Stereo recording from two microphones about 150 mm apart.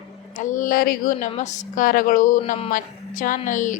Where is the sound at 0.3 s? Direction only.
60° left (ahead or behind).